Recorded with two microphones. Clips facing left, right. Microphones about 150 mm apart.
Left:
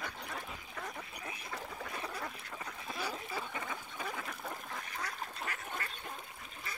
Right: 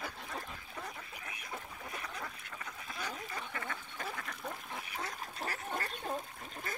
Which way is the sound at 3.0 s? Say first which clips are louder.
Left 2 dB; 10° left (ahead or behind).